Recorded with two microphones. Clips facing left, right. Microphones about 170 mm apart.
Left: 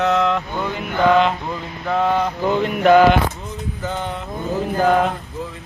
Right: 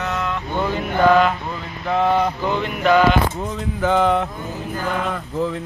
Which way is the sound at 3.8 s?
80° right.